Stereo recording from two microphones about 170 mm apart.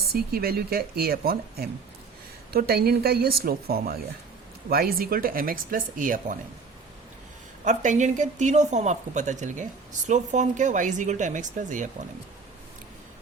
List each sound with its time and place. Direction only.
0.1 s speech: 65° right (ahead or behind)
7.6 s speech: 45° right (ahead or behind)